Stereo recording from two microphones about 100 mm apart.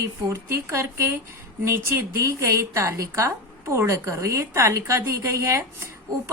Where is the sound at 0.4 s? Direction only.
25° right (ahead or behind).